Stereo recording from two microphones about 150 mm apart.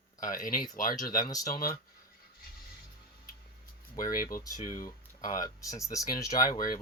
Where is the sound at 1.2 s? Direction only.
25° left (ahead or behind).